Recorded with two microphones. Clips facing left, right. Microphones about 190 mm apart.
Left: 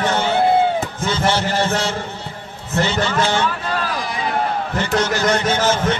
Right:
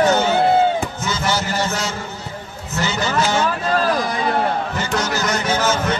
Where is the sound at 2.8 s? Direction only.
30° left (ahead or behind).